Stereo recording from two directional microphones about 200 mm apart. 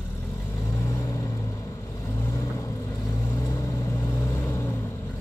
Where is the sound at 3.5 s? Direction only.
15° left (ahead or behind).